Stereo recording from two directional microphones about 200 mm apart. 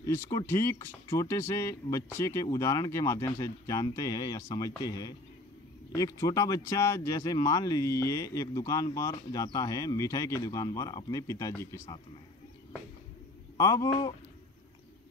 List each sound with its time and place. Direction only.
0.0 s speech: 15° left (ahead or behind)
13.6 s speech: 15° left (ahead or behind)